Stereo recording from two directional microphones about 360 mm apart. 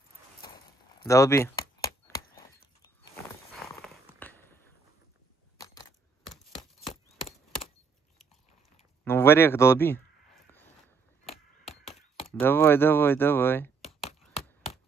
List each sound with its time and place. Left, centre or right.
0.4 s keys jangling: centre
2.0 s a sound: centre
9.0 s speech: centre
12.3 s speech: centre